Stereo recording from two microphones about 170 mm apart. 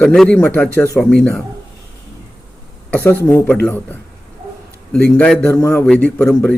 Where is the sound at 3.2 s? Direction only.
10° left (ahead or behind).